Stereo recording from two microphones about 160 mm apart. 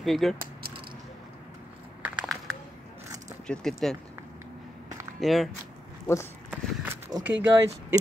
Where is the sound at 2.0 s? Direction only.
5° right (ahead or behind).